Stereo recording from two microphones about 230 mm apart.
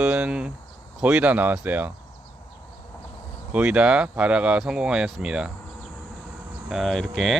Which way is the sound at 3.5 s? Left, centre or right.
Centre.